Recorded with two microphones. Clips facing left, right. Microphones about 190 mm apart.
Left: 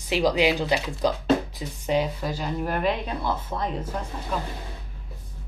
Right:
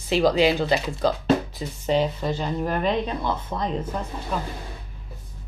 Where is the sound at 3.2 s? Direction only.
20° right (ahead or behind).